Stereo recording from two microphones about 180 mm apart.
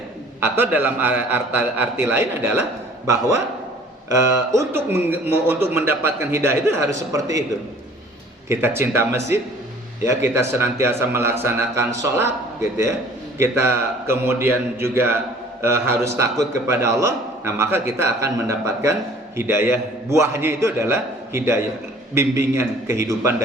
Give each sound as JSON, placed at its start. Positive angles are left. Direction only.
{"t": 0.3, "sound": "a man's voice", "side_deg": -10}
{"t": 8.4, "sound": "a man's voice", "side_deg": -15}